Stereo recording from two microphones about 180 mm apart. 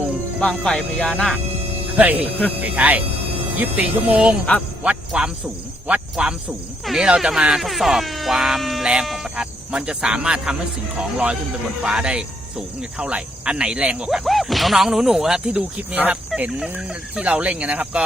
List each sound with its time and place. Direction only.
0.3 s speech: 5° left (ahead or behind)
2.0 s speech: 10° right (ahead or behind)
11.8 s speech: 5° right (ahead or behind)